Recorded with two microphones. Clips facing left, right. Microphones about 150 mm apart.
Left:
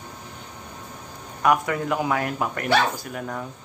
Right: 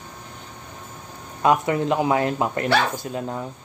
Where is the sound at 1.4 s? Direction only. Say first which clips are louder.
Right 2 dB; 25° right (ahead or behind).